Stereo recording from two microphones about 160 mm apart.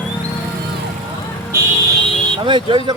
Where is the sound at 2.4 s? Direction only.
30° right (ahead or behind).